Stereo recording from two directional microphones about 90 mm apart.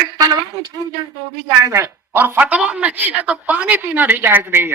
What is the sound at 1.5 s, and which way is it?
Speech, 35° right (ahead or behind).